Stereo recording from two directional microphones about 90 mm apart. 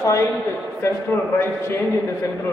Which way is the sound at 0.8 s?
25° left (ahead or behind).